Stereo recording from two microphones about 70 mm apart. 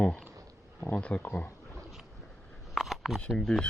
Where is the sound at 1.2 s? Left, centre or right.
Left.